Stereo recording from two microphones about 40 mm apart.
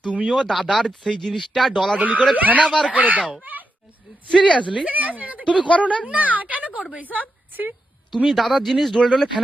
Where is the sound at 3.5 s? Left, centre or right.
Right.